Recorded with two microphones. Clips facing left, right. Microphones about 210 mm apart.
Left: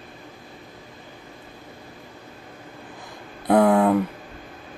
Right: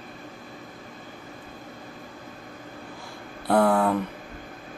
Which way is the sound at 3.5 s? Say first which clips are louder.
Left 4 dB; 15° left (ahead or behind).